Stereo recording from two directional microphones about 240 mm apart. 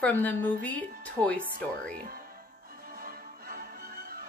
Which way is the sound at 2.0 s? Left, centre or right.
Right.